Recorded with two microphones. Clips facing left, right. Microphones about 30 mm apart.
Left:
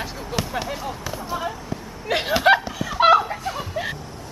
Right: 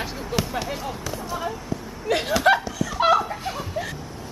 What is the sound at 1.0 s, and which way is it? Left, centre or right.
Basketball bounce, centre.